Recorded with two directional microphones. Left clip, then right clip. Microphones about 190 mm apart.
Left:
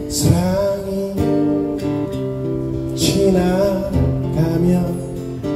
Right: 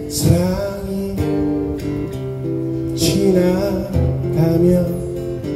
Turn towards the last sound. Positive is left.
turn(degrees=-25)  # may be behind; listen again after turning